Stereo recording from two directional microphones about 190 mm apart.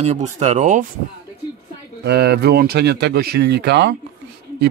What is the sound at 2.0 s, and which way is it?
Speech, 60° right (ahead or behind).